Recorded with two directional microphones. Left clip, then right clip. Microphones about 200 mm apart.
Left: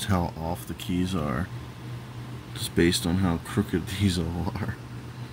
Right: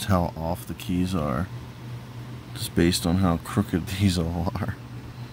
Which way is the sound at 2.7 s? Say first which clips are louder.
Right 1 dB; 40° right (ahead or behind).